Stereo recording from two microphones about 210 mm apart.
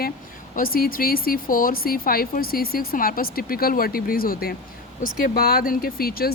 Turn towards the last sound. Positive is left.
turn(degrees=45)  # may be behind; listen again after turning